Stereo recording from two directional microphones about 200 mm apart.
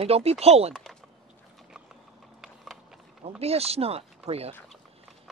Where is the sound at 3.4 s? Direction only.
30° right (ahead or behind).